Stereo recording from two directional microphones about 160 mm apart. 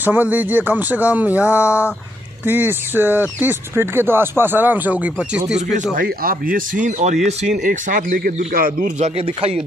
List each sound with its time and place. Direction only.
0.0 s speech: 10° right (ahead or behind)
5.8 s speech: 65° right (ahead or behind); by 7.3 s 45° right (ahead or behind)
7.6 s speech: 60° right (ahead or behind)
9.0 s speech: 40° right (ahead or behind)